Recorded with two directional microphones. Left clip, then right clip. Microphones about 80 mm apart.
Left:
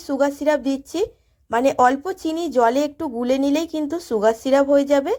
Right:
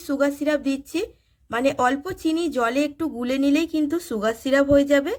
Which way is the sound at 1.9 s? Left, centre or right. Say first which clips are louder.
Left 1 dB; centre.